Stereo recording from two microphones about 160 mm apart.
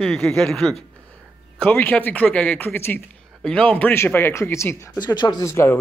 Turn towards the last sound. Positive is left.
turn(degrees=15)  # may be behind; listen again after turning